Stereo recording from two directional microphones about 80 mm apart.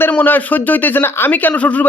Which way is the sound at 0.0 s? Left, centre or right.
Left.